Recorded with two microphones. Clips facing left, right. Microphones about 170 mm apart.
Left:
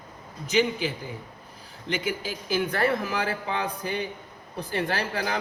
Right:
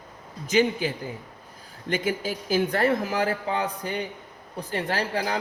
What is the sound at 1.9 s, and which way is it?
Speech, 50° right (ahead or behind).